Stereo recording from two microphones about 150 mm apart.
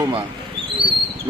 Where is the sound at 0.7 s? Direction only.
35° right (ahead or behind).